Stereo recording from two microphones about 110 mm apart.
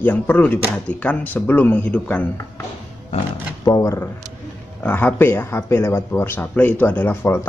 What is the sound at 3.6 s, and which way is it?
Speech, 30° left (ahead or behind).